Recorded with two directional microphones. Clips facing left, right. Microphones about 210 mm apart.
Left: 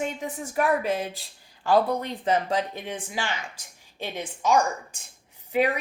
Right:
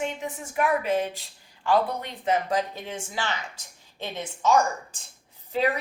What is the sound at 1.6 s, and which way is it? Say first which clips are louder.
Speech: left 2 dB; 40° left (ahead or behind).